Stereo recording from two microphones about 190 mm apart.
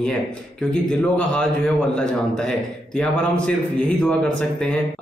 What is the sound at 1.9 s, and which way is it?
A man's voice, 5° left (ahead or behind).